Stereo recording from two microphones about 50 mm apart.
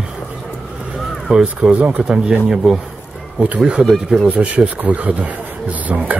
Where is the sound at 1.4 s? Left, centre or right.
Right.